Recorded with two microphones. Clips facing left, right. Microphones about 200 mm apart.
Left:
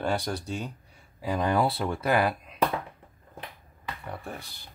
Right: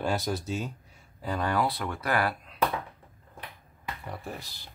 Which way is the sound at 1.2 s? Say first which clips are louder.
Left 3 dB; 10° left (ahead or behind).